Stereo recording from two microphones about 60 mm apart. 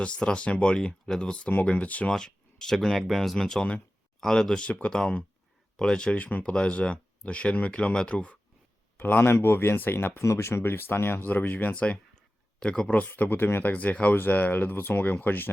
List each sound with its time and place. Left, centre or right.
0.0 s speech: centre
2.1 s speech: centre
9.0 s a man's voice: left
10.2 s speech: left
12.5 s speech: centre
13.0 s speech: left